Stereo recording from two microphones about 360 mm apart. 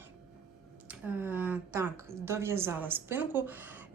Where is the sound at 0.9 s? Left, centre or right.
Centre.